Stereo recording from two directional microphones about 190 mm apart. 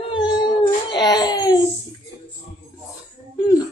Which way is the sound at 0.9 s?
20° left (ahead or behind).